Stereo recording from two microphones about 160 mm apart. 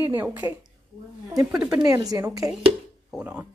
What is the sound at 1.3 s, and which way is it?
A woman's voice, 20° right (ahead or behind).